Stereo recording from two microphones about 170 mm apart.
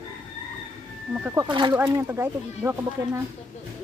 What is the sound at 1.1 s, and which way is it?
Speech, 10° right (ahead or behind).